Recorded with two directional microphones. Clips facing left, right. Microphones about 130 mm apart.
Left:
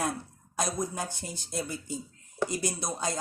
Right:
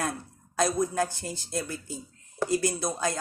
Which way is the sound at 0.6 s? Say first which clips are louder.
Right 6 dB; 20° left (ahead or behind).